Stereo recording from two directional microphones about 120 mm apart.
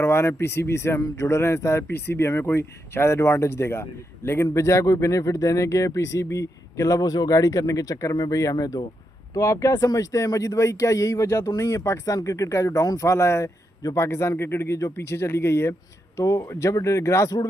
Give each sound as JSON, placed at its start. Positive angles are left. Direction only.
{"t": 0.0, "sound": "speech", "side_deg": 20}